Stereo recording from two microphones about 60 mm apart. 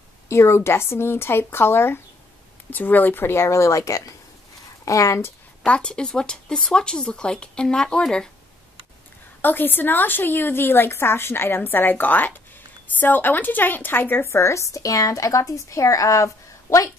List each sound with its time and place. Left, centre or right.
0.3 s a woman's voice: left
2.7 s speech: left
5.7 s speech: centre
9.4 s a woman's voice: left